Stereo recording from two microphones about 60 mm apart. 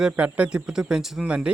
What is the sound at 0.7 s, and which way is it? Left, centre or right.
Speech, centre.